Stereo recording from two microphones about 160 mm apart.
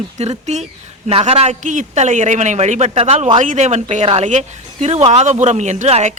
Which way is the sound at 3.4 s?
50° right (ahead or behind).